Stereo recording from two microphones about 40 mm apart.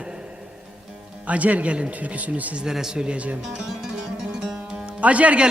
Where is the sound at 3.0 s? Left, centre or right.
Right.